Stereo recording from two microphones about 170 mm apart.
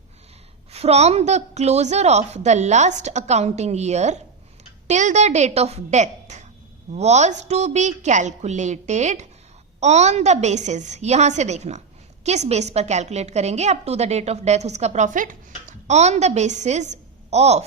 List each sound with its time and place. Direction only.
0.7 s a woman's voice: 40° right (ahead or behind)